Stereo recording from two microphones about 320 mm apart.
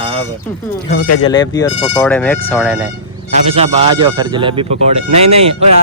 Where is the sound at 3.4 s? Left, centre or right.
Centre.